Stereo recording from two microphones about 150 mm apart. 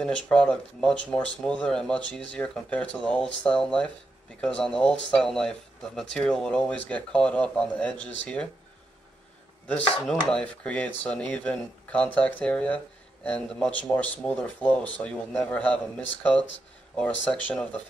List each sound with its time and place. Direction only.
0.0 s speech: 5° left (ahead or behind)
9.7 s speech: 10° left (ahead or behind)